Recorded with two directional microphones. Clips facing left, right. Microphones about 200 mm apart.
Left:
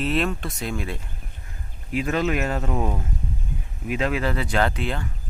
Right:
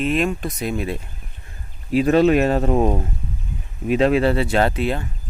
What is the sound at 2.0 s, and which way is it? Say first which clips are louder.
Speech: right 9 dB; 30° right (ahead or behind).